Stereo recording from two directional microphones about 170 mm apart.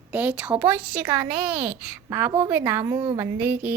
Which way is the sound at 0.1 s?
10° right (ahead or behind).